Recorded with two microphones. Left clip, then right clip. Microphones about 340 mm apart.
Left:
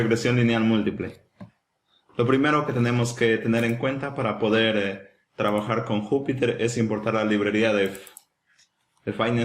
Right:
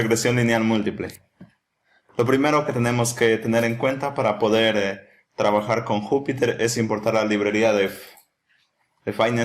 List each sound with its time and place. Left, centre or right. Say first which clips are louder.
0.1 s a man's voice: right 3 dB; centre
2.1 s a man's voice: right 2 dB; centre
5.8 s speech: right 3 dB; right
6.2 s a man's voice: right 2 dB; centre
9.0 s a man's voice: right 4 dB; centre